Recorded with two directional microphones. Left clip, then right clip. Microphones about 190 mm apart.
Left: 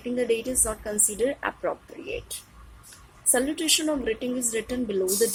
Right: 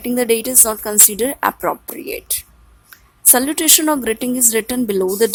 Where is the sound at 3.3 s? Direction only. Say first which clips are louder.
Right 8 dB; 65° right (ahead or behind).